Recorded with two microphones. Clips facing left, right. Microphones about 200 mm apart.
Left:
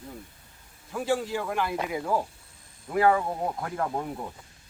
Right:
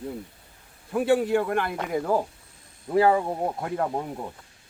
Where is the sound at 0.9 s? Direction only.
60° right (ahead or behind).